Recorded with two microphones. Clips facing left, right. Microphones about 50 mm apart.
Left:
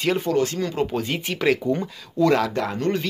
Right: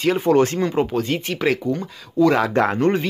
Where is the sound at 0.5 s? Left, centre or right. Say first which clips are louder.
Right 6 dB; right.